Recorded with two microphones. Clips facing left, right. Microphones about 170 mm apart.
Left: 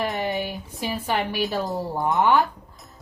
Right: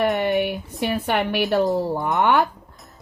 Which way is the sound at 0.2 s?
65° right (ahead or behind).